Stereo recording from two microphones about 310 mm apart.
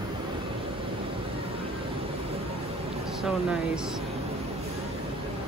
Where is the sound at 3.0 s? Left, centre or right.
Centre.